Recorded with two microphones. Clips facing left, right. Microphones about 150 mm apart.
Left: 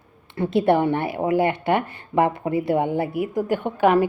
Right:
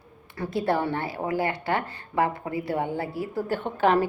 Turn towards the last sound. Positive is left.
turn(degrees=15)  # may be behind; listen again after turning